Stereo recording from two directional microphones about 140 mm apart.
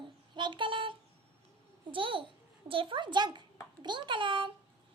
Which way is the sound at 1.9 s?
40° right (ahead or behind).